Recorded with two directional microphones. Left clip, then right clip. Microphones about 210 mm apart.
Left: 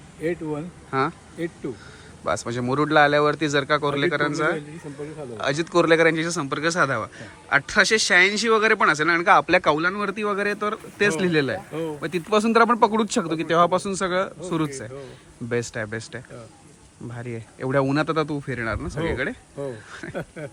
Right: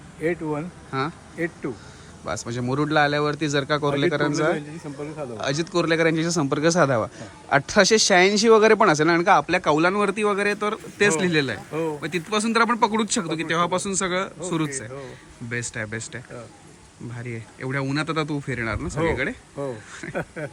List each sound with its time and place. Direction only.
0.2 s a man's voice: centre (ahead or behind)